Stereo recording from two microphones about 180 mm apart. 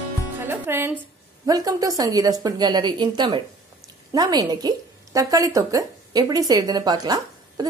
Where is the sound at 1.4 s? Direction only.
20° right (ahead or behind).